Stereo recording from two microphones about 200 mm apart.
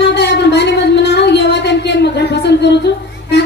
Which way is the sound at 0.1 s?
55° left (ahead or behind).